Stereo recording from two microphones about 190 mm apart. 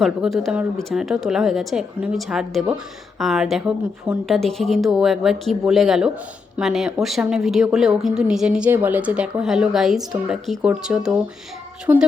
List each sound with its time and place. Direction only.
0.0 s a woman's voice: centre (ahead or behind)